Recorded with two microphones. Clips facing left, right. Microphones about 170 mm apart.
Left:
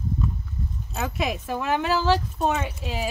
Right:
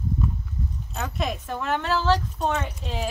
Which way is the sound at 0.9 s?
5° left (ahead or behind).